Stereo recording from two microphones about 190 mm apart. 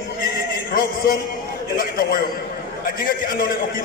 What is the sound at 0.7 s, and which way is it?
A man's voice, 50° left (ahead or behind).